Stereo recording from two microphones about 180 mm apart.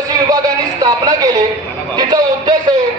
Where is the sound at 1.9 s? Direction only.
25° right (ahead or behind).